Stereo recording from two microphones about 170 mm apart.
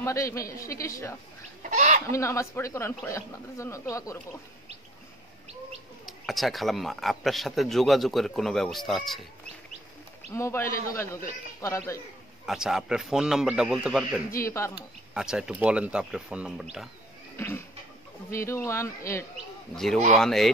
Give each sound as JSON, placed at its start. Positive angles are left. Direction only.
{"t": 0.0, "sound": "speech", "side_deg": 15}
{"t": 1.6, "sound": "chicken", "side_deg": -45}
{"t": 2.0, "sound": "speech", "side_deg": 15}
{"t": 6.0, "sound": "a man's voice", "side_deg": 0}
{"t": 10.3, "sound": "speech", "side_deg": 15}
{"t": 12.4, "sound": "a man's voice", "side_deg": -5}
{"t": 14.4, "sound": "speech", "side_deg": 15}
{"t": 15.1, "sound": "a man's voice", "side_deg": -5}
{"t": 17.4, "sound": "a sound", "side_deg": 15}
{"t": 18.3, "sound": "speech", "side_deg": 15}
{"t": 19.7, "sound": "a man's voice", "side_deg": 0}